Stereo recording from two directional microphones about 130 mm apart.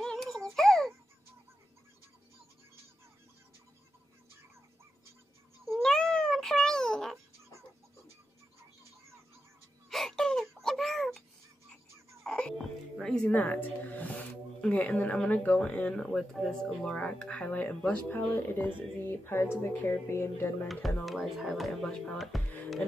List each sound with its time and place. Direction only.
0.0 s music: 5° left (ahead or behind)
0.6 s babbling: 5° left (ahead or behind)
5.7 s a sound: 5° left (ahead or behind)
9.8 s wail: centre (ahead or behind)
12.2 s speech: 5° left (ahead or behind)
21.0 s speech: centre (ahead or behind)